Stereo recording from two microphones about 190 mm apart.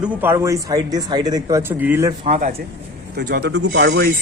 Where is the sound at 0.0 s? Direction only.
10° right (ahead or behind).